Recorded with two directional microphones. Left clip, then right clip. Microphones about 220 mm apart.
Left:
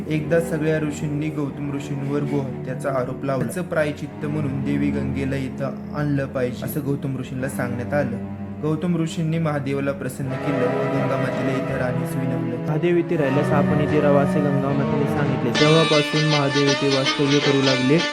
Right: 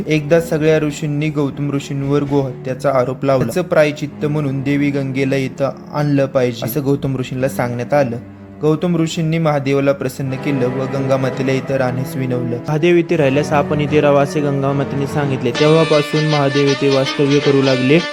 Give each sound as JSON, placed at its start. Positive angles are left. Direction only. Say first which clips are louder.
{"t": 0.1, "sound": "a man's voice", "louder": "right 7 dB", "side_deg": -30}
{"t": 2.8, "sound": "a man's voice", "louder": "right 9 dB", "side_deg": -30}
{"t": 12.7, "sound": "a man's voice", "louder": "right 7 dB", "side_deg": -15}
{"t": 15.5, "sound": "speech", "louder": "right 4 dB", "side_deg": 0}